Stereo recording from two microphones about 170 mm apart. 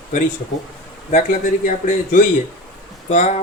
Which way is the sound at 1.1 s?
45° left (ahead or behind).